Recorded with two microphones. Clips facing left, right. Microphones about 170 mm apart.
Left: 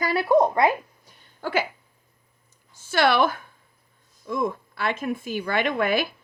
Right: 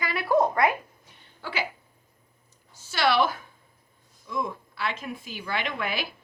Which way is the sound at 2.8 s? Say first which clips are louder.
Left 3 dB; 55° left (ahead or behind).